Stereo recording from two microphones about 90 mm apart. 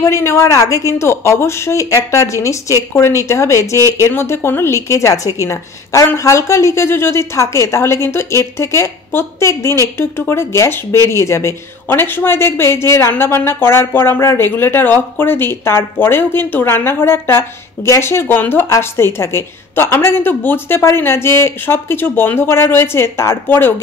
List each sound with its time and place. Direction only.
0.0 s a woman's voice: 35° left (ahead or behind)